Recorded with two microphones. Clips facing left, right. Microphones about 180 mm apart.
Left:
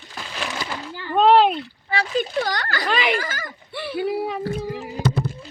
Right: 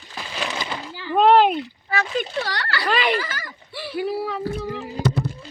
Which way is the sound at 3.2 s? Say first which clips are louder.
Even; 50° left (ahead or behind).